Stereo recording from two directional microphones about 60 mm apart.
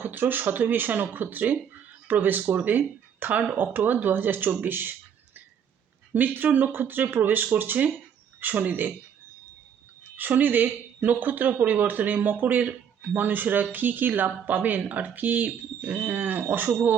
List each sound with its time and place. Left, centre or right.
0.0 s speech: right
6.1 s speech: right
10.2 s speech: right